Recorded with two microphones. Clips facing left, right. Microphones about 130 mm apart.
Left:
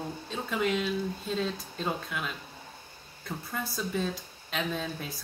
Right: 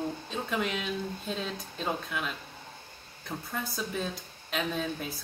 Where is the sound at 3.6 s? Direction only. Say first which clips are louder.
Left 4 dB; centre (ahead or behind).